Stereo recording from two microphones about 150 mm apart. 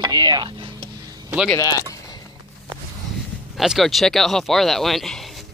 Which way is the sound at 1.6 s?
20° left (ahead or behind).